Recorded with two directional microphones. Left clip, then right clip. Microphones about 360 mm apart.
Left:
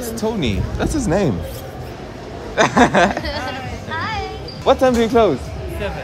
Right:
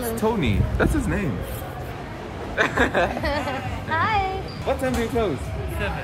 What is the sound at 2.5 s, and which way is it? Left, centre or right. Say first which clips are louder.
Speech: left 7 dB; centre.